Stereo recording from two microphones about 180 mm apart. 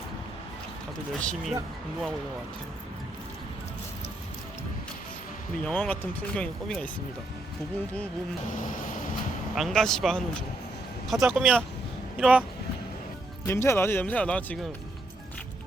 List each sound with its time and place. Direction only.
1.2 s speech: 5° left (ahead or behind)
5.5 s speech: 5° left (ahead or behind)
8.6 s vehicle: 50° left (ahead or behind)
9.6 s speech: centre (ahead or behind)
13.4 s speech: 15° left (ahead or behind)